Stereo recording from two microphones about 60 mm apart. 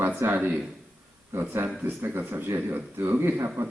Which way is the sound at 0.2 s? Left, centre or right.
Right.